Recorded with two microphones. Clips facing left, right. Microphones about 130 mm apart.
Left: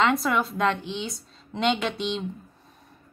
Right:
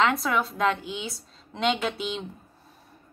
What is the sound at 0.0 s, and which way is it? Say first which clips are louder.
A woman's voice: left 1 dB; centre (ahead or behind).